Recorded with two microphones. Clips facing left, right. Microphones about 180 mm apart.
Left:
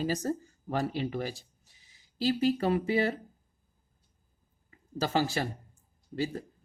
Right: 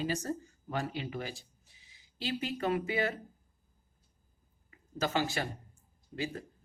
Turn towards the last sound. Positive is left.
turn(degrees=35)  # may be behind; listen again after turning